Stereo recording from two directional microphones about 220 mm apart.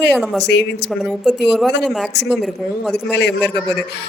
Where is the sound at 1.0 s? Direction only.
Centre (ahead or behind).